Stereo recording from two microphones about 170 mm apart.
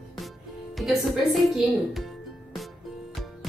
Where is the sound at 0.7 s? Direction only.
Centre (ahead or behind).